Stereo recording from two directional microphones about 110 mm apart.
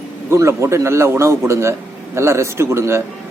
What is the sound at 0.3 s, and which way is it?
Speech, 25° right (ahead or behind).